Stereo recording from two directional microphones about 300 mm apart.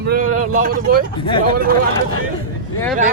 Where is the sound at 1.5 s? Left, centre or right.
Right.